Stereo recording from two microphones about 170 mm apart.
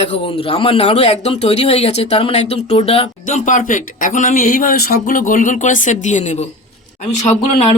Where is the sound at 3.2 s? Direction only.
50° left (ahead or behind).